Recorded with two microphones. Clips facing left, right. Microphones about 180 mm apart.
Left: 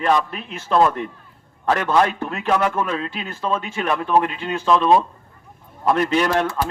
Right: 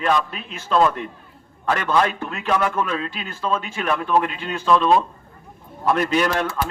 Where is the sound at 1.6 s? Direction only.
30° left (ahead or behind).